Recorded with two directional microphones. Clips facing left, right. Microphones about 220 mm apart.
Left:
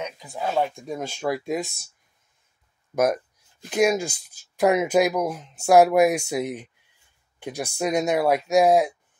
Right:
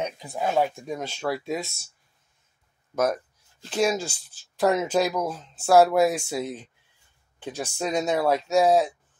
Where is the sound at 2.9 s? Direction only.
10° left (ahead or behind).